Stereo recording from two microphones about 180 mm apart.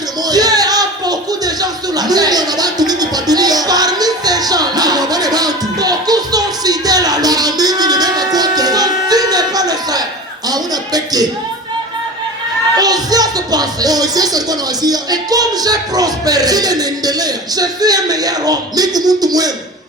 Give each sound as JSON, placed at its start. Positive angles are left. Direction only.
{"t": 0.3, "sound": "music", "side_deg": -20}
{"t": 12.7, "sound": "speech", "side_deg": -20}